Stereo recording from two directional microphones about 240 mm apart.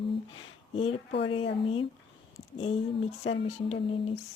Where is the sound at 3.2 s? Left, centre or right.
Left.